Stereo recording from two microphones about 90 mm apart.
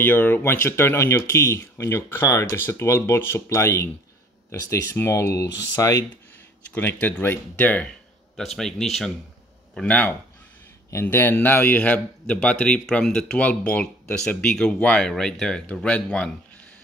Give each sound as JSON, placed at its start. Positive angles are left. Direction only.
{"t": 0.0, "sound": "speech", "side_deg": 25}
{"t": 6.7, "sound": "speech", "side_deg": 15}
{"t": 8.4, "sound": "a man's voice", "side_deg": 5}
{"t": 9.8, "sound": "speech", "side_deg": 15}